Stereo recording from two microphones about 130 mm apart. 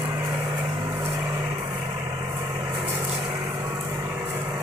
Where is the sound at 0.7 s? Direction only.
25° right (ahead or behind).